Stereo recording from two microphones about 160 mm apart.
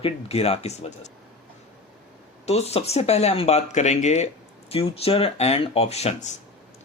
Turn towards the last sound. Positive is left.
turn(degrees=45)  # may be behind; listen again after turning